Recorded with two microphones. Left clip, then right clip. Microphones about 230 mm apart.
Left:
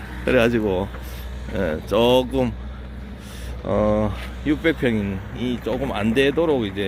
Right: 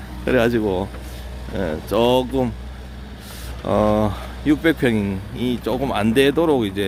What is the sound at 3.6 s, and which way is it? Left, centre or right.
Speech, centre.